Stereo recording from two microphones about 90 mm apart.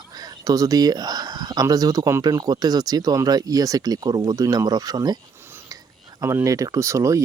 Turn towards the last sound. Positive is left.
turn(degrees=-35)  # may be behind; listen again after turning